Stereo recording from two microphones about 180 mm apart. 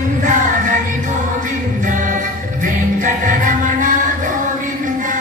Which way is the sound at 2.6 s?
45° right (ahead or behind).